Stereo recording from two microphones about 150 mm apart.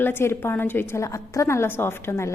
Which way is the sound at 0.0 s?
15° left (ahead or behind).